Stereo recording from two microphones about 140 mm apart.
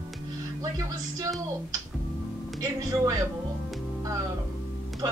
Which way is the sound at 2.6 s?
25° right (ahead or behind).